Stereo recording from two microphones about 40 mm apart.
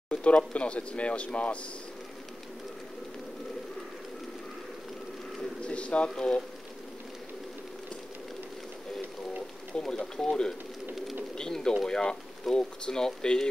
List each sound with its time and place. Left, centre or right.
0.2 s speech: left
5.6 s bird: left
6.0 s speech: centre
9.8 s speech: centre